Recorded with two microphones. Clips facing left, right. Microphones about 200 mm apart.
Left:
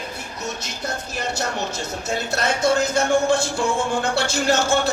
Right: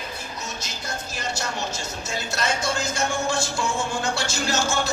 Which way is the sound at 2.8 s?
60° left (ahead or behind).